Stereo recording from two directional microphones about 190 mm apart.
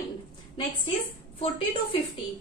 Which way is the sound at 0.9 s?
30° left (ahead or behind).